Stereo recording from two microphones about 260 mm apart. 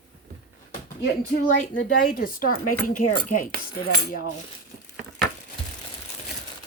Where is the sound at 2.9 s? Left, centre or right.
Left.